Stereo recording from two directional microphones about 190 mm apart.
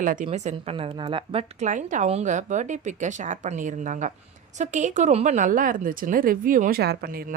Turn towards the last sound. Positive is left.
turn(degrees=-50)  # may be behind; listen again after turning